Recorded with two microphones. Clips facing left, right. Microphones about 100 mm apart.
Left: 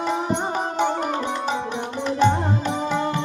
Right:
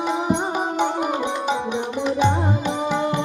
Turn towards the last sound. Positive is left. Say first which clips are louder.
# right 1 dB
turn(degrees=-15)  # may be behind; listen again after turning